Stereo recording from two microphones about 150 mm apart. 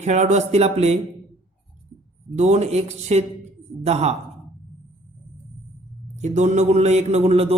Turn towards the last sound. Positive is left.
turn(degrees=-40)  # may be behind; listen again after turning